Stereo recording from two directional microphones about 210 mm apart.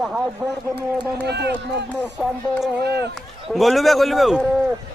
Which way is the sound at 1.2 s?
50° right (ahead or behind).